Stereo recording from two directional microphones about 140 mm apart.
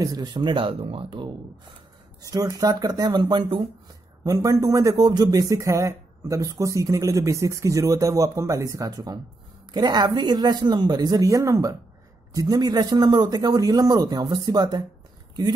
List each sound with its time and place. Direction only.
0.0 s speech: 30° right (ahead or behind)
2.3 s speech: 25° right (ahead or behind)